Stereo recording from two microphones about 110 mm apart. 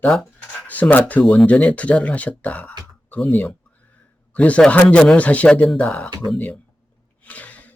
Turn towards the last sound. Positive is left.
turn(degrees=15)  # may be behind; listen again after turning